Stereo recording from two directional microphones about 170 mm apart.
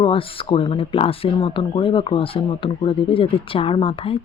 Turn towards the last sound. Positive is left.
turn(degrees=30)  # may be behind; listen again after turning